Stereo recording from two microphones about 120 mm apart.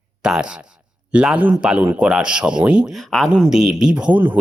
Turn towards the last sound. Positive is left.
turn(degrees=-15)  # may be behind; listen again after turning